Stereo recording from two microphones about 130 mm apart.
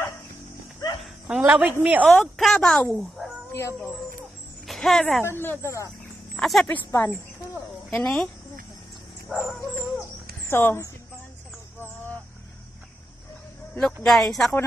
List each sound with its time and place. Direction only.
1.2 s a woman's voice: 10° right (ahead or behind)
2.0 s speech: 5° left (ahead or behind)
3.5 s speech: 20° left (ahead or behind)
4.6 s speech: centre (ahead or behind)
5.2 s speech: 15° left (ahead or behind)
6.3 s speech: centre (ahead or behind)
6.9 s speech: 20° left (ahead or behind)
7.9 s speech: 5° left (ahead or behind)
9.3 s dog: centre (ahead or behind)
10.5 s speech: 15° left (ahead or behind)
14.0 s speech: centre (ahead or behind)